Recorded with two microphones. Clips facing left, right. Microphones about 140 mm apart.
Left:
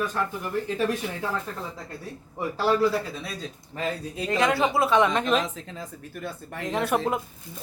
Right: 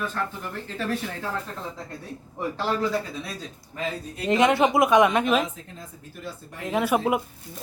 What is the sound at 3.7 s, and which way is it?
Speech, 30° left (ahead or behind).